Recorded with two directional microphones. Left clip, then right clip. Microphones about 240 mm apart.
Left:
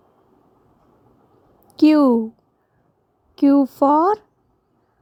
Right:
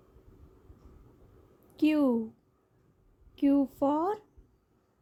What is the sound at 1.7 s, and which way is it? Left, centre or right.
Speech, left.